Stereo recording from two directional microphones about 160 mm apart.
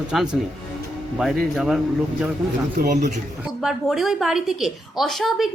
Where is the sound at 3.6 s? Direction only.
Centre (ahead or behind).